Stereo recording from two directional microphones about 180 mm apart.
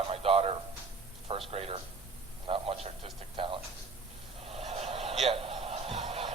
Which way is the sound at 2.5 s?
30° right (ahead or behind).